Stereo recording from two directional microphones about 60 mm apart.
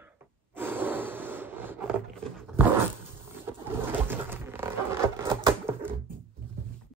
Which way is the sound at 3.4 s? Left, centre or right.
Right.